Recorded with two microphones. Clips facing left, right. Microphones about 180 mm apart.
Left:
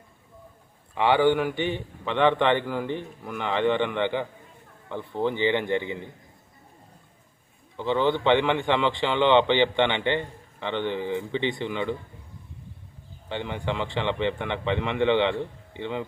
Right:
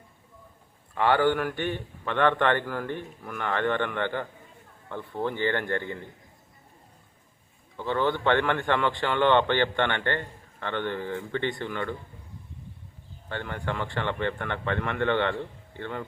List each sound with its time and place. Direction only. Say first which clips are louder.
0.9 s a man's voice: left 2 dB; 15° left (ahead or behind)
7.8 s a man's voice: left 3 dB; 20° left (ahead or behind)
13.2 s a man's voice: left 3 dB; 20° left (ahead or behind)